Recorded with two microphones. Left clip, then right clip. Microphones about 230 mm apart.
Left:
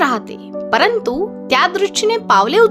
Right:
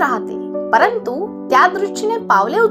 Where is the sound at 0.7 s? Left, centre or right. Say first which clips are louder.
Even; left.